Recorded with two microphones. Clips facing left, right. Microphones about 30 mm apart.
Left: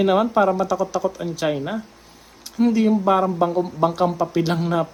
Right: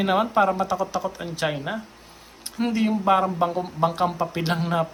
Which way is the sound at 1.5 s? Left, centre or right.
Centre.